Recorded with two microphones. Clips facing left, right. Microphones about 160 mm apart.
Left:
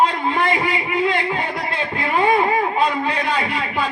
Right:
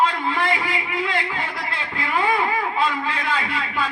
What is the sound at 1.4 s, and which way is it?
A man's voice, 35° left (ahead or behind).